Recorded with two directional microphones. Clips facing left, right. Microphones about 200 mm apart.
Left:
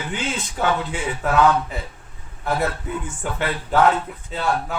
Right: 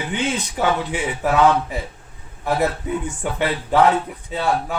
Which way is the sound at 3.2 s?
15° right (ahead or behind).